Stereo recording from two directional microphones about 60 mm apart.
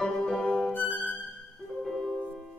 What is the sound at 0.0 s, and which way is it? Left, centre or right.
Music, centre.